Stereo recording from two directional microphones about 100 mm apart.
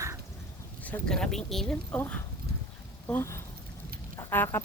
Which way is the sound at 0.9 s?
10° left (ahead or behind).